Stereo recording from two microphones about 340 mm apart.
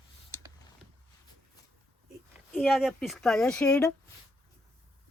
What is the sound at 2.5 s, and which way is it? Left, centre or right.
Speech, centre.